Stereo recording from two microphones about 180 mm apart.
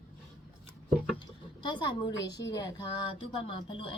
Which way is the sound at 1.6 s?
25° left (ahead or behind).